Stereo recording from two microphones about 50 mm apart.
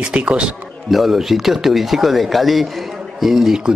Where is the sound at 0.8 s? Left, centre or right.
Centre.